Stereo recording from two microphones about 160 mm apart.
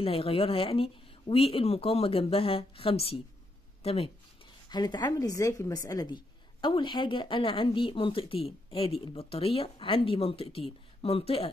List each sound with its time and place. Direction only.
0.0 s speech: 35° left (ahead or behind)
4.6 s a woman's voice: 25° left (ahead or behind)